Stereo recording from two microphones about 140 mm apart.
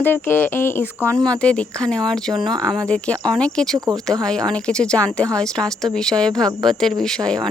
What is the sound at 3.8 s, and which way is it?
Speech, 25° right (ahead or behind).